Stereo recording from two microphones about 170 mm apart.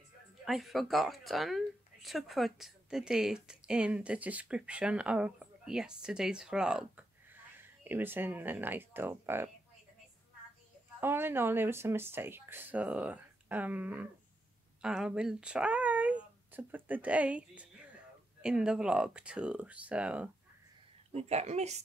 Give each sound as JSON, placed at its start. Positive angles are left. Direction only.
{"t": 0.5, "sound": "speech", "side_deg": 0}
{"t": 11.0, "sound": "speech", "side_deg": -15}
{"t": 21.1, "sound": "a woman's voice", "side_deg": -40}